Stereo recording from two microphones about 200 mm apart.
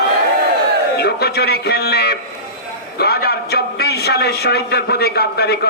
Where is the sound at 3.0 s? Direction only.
55° left (ahead or behind).